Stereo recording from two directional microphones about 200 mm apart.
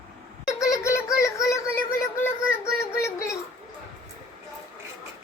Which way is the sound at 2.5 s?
15° left (ahead or behind).